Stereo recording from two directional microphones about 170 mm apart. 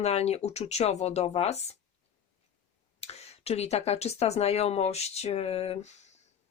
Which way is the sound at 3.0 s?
40° left (ahead or behind).